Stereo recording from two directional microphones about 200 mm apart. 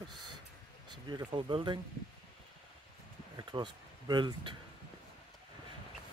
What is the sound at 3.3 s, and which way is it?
Speech, 25° right (ahead or behind).